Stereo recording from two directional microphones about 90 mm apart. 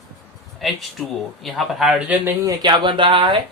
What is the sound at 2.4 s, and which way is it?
Speech, 60° right (ahead or behind).